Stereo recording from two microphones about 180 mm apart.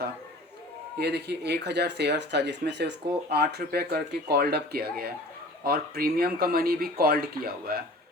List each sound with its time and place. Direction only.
0.9 s speech: 65° right (ahead or behind)